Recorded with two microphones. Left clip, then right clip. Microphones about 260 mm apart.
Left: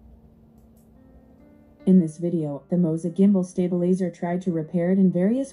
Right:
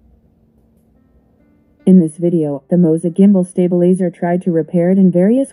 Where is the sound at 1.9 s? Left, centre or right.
Right.